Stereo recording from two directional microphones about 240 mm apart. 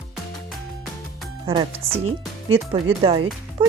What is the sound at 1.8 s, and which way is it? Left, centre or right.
Speech, right.